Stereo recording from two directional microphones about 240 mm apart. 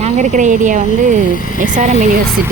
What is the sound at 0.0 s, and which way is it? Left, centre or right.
A woman's voice, right.